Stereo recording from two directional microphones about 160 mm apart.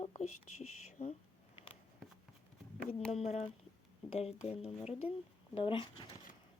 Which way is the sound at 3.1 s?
40° left (ahead or behind).